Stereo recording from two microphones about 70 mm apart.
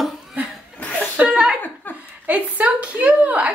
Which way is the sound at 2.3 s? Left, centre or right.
Right.